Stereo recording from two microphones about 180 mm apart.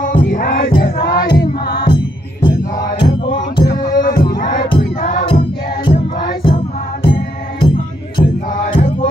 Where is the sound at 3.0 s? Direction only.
25° left (ahead or behind).